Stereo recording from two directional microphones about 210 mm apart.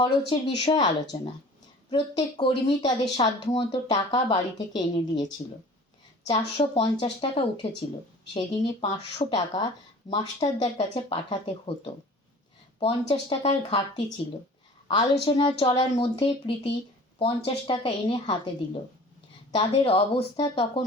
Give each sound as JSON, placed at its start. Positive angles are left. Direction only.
{"t": 0.0, "sound": "speech", "side_deg": 25}